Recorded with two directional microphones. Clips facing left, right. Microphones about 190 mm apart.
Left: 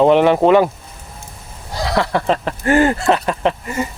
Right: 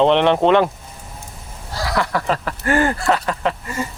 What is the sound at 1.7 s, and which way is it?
Speech, 25° left (ahead or behind).